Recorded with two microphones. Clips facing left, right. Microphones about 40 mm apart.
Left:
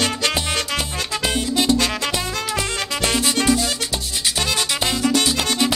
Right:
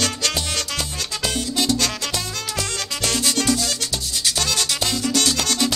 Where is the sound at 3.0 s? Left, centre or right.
Left.